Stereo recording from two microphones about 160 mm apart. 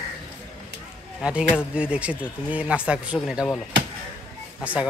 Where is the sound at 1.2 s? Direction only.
5° right (ahead or behind).